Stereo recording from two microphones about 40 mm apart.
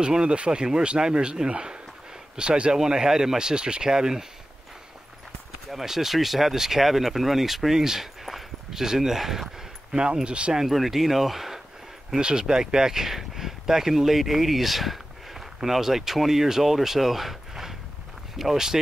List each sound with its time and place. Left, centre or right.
0.0 s a man's voice: right
2.8 s speech: centre
5.7 s speech: centre
9.9 s a man's voice: right
10.7 s speech: centre
12.2 s speech: centre